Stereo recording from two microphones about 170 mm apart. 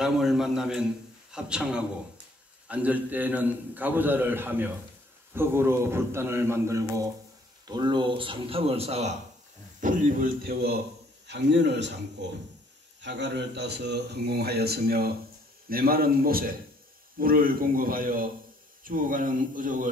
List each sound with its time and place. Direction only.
0.0 s a man's voice: centre (ahead or behind); by 9.1 s 40° right (ahead or behind)
9.8 s speech: 50° right (ahead or behind); by 10.8 s 65° right (ahead or behind)
11.2 s a man's voice: 90° right; by 19.9 s 50° right (ahead or behind)